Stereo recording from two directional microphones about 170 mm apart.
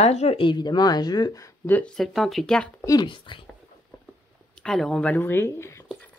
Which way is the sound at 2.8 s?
25° left (ahead or behind).